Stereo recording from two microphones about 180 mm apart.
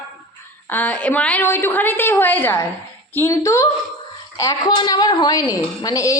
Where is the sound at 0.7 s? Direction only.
10° left (ahead or behind).